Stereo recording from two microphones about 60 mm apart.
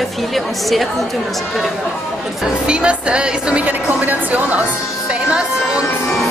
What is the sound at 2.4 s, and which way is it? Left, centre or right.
Speech, centre.